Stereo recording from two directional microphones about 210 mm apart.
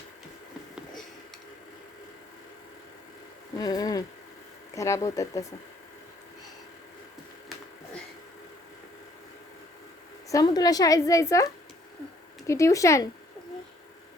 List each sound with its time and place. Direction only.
3.6 s a woman's voice: 20° left (ahead or behind)
10.2 s a woman's voice: 15° left (ahead or behind)
12.5 s a woman's voice: 15° left (ahead or behind)